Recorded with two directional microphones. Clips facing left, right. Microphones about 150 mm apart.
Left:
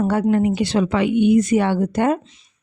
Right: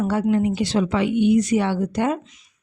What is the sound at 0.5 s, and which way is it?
Speech, 65° left (ahead or behind).